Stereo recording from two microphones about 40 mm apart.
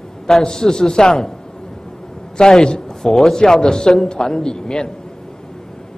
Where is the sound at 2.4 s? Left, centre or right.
Centre.